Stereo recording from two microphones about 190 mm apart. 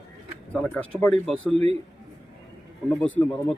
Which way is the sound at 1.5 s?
30° right (ahead or behind).